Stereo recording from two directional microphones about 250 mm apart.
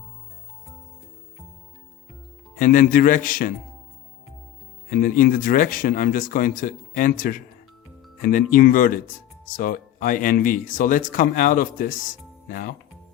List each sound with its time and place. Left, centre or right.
2.6 s speech: left
4.9 s speech: left